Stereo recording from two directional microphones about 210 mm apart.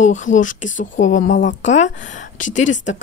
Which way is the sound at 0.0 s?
35° left (ahead or behind).